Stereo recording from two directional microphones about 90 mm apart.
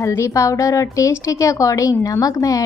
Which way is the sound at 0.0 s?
35° left (ahead or behind).